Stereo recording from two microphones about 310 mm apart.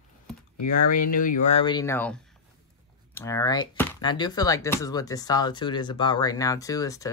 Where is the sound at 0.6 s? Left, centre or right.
Left.